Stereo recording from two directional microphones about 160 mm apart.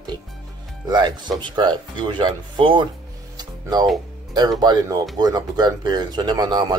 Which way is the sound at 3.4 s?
25° right (ahead or behind).